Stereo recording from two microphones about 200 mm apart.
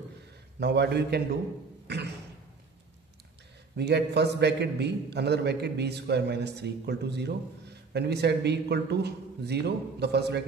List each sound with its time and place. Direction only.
0.6 s a man's voice: 55° right (ahead or behind)
3.7 s a man's voice: 55° right (ahead or behind)